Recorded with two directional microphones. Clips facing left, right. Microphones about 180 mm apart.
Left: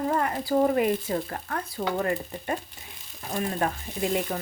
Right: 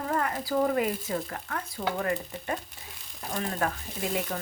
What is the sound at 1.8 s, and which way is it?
Stir, 45° left (ahead or behind).